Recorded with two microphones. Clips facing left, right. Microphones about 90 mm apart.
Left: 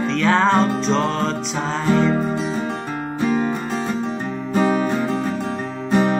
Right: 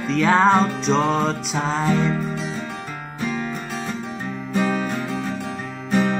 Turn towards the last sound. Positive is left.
turn(degrees=30)  # may be behind; listen again after turning